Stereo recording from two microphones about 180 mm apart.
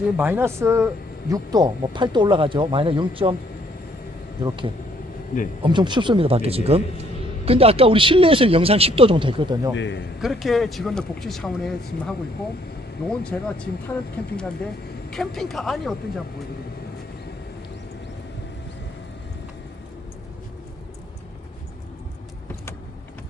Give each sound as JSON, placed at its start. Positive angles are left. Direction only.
{"t": 0.2, "sound": "a man's voice", "side_deg": -10}
{"t": 4.4, "sound": "a man's voice", "side_deg": -25}
{"t": 9.7, "sound": "a man's voice", "side_deg": 90}
{"t": 10.2, "sound": "speech", "side_deg": 0}